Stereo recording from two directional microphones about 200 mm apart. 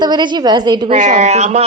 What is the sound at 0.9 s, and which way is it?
Speech, 35° right (ahead or behind).